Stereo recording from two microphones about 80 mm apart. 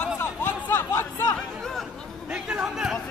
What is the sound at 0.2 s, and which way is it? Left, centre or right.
Chatter, left.